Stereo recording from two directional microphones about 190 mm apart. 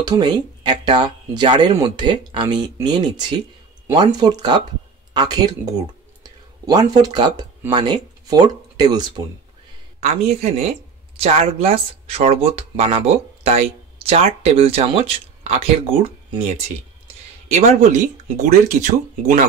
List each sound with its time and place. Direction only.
0.0 s speech: 25° right (ahead or behind)
9.9 s speech: 35° right (ahead or behind)